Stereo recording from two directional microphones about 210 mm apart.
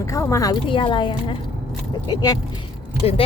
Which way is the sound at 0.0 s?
15° left (ahead or behind).